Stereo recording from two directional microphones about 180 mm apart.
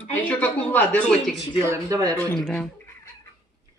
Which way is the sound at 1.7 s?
20° right (ahead or behind).